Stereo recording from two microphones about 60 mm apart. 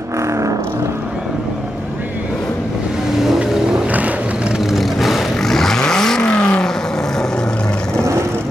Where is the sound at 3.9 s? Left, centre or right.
Right.